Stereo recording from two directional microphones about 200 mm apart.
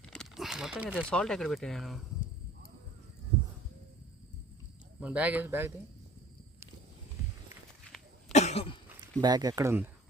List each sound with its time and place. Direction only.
0.0 s a sound: 5° left (ahead or behind)
1.1 s speech: centre (ahead or behind)
4.9 s speech: 5° right (ahead or behind)
8.3 s cough: 35° left (ahead or behind)
9.2 s speech: 20° right (ahead or behind)